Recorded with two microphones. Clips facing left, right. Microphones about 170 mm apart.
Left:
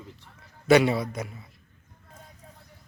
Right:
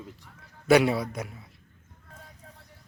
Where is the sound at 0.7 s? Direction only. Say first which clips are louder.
Left 1 dB; 5° right (ahead or behind).